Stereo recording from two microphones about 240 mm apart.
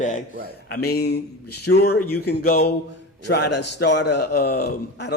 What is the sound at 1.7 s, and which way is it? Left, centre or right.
Speech, left.